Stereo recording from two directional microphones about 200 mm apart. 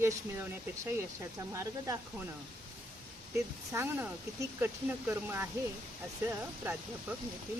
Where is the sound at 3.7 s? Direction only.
10° right (ahead or behind).